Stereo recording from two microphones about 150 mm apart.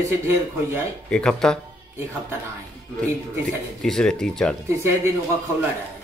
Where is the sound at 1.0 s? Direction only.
5° left (ahead or behind).